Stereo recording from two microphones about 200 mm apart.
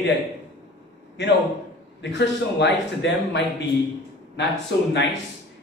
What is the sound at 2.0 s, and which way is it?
A man's voice, 60° left (ahead or behind).